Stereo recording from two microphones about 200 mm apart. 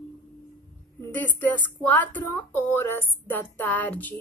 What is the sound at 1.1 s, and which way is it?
Speech, 10° left (ahead or behind).